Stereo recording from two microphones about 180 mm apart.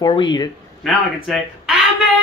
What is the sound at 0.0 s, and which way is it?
Speech, 25° left (ahead or behind).